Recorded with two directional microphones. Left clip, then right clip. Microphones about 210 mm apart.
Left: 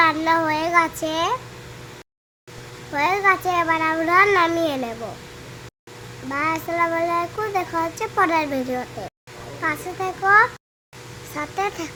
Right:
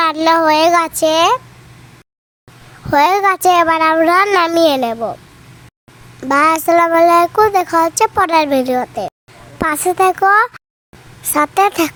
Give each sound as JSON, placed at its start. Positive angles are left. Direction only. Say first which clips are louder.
{"t": 0.0, "sound": "child singing", "louder": "right 6 dB", "side_deg": -50}
{"t": 2.9, "sound": "child singing", "louder": "right 7 dB", "side_deg": -50}
{"t": 6.2, "sound": "child singing", "louder": "right 12 dB", "side_deg": -55}
{"t": 9.6, "sound": "child singing", "louder": "right 11 dB", "side_deg": -55}